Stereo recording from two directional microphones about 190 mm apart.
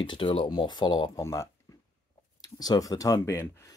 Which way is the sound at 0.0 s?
25° left (ahead or behind).